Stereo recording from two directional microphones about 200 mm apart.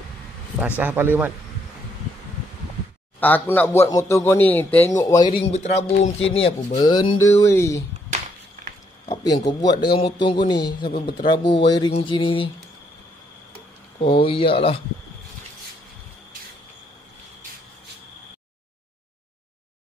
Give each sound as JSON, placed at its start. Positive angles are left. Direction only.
{"t": 0.6, "sound": "speech", "side_deg": -5}
{"t": 3.2, "sound": "speech", "side_deg": 10}
{"t": 5.5, "sound": "speech", "side_deg": 35}
{"t": 9.1, "sound": "speech", "side_deg": 20}
{"t": 14.0, "sound": "speech", "side_deg": 25}